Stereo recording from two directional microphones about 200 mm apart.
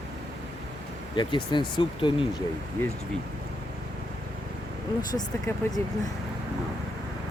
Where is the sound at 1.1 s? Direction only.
25° left (ahead or behind).